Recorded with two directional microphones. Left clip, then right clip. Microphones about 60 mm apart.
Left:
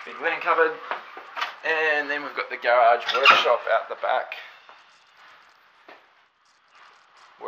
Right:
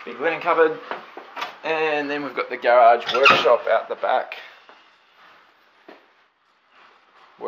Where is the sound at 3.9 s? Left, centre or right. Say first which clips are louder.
Right 3 dB; right.